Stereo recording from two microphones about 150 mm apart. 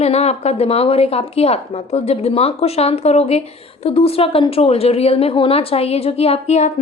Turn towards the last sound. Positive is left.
turn(degrees=50)  # may be behind; listen again after turning